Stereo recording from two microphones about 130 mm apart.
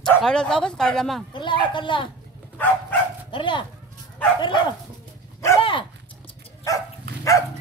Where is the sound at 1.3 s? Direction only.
35° left (ahead or behind).